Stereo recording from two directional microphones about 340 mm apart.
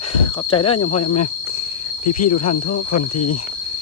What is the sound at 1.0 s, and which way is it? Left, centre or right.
Speech, left.